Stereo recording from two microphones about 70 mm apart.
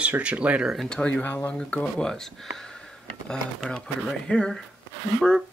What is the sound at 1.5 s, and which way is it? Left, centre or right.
Speech, centre.